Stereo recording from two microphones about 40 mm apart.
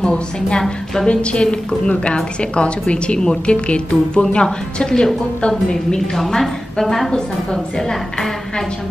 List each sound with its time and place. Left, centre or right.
0.0 s a woman's voice: left